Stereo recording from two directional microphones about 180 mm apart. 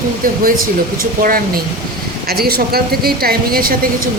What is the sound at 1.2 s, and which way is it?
A woman's voice, 55° right (ahead or behind).